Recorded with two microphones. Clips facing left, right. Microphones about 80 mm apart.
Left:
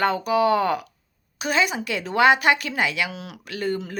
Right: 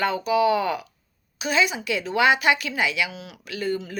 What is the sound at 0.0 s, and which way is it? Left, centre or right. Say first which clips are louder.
Speech: left 1 dB; left.